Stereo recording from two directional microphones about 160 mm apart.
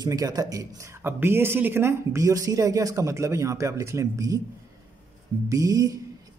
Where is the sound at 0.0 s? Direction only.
25° right (ahead or behind).